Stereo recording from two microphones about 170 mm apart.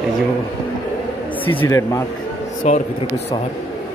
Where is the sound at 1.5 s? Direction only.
20° left (ahead or behind).